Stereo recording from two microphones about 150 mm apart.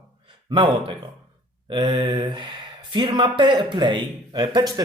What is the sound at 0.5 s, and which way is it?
A man's voice, 35° right (ahead or behind).